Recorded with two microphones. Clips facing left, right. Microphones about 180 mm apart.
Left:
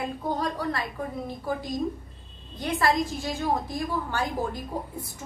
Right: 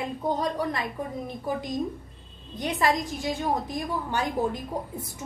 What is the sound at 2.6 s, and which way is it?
A woman's voice, 20° right (ahead or behind).